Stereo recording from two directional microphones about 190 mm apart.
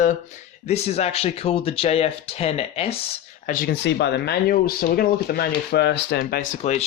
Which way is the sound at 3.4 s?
50° left (ahead or behind).